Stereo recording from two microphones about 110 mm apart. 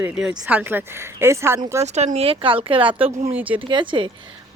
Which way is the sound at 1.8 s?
90° right.